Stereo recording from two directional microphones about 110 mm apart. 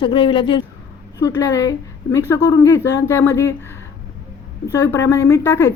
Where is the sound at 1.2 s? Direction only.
30° left (ahead or behind).